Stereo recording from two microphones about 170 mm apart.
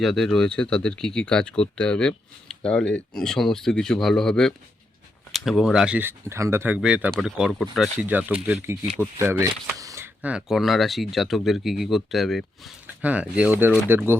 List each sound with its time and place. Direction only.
0.0 s speech: centre (ahead or behind)
8.6 s speech: 15° right (ahead or behind)